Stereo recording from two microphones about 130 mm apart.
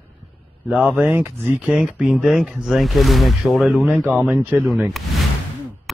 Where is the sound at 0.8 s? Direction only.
15° right (ahead or behind).